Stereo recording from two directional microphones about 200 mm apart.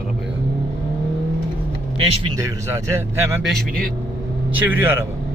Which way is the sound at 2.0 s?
20° right (ahead or behind).